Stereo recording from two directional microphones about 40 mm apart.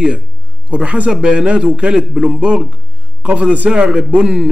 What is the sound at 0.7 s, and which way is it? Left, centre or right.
A man's voice, right.